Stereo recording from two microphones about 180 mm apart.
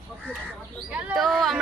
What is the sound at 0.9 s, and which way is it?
Speech, centre (ahead or behind).